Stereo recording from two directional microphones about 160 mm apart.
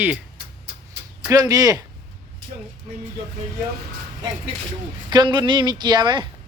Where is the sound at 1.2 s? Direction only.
20° right (ahead or behind).